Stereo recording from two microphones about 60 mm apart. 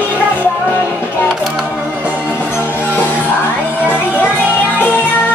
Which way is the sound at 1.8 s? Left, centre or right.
Right.